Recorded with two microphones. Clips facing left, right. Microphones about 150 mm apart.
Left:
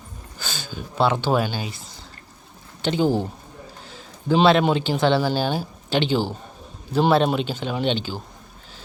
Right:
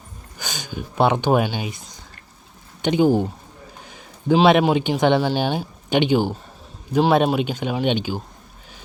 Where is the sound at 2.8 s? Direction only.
15° right (ahead or behind).